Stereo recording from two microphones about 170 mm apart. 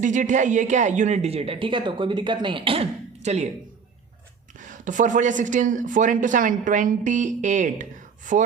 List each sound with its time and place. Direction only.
0.0 s speech: 45° right (ahead or behind); by 2.8 s 30° right (ahead or behind)
3.2 s speech: 40° right (ahead or behind)
4.6 s speech: 50° right (ahead or behind)